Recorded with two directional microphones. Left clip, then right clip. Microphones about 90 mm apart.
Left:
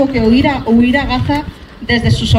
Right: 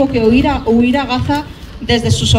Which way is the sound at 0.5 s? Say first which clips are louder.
Even; 5° right (ahead or behind).